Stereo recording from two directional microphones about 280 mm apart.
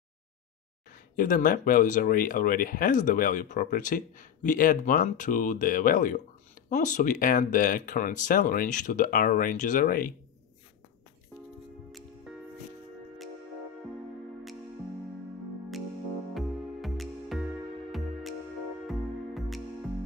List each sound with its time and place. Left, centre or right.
1.1 s speech: left
16.3 s music: centre